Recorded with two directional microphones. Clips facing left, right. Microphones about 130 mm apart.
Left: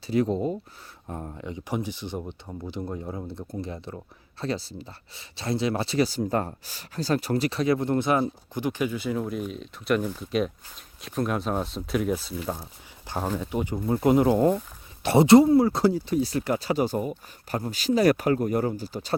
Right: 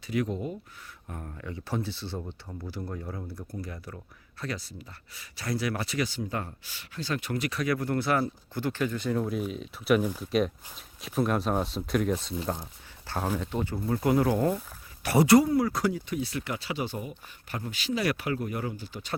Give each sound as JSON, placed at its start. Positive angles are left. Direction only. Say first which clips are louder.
{"t": 0.1, "sound": "speech", "louder": "left 6 dB", "side_deg": 30}
{"t": 13.1, "sound": "a sound", "louder": "left 2 dB", "side_deg": 15}
{"t": 13.4, "sound": "speech", "louder": "left 3 dB", "side_deg": 15}